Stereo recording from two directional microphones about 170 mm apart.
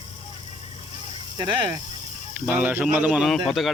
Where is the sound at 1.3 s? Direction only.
25° right (ahead or behind).